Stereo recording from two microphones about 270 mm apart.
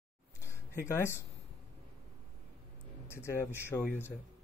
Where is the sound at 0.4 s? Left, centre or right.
Centre.